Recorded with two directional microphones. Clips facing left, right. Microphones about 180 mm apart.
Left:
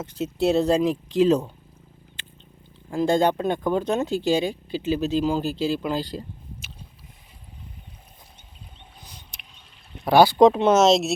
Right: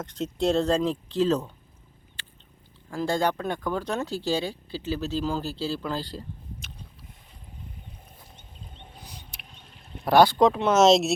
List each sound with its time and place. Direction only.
0.0 s speech: 5° left (ahead or behind)
2.9 s speech: 20° left (ahead or behind)
9.0 s a sound: 10° right (ahead or behind)
10.0 s speech: 5° left (ahead or behind)
10.3 s speech: 20° left (ahead or behind)
10.8 s speech: centre (ahead or behind)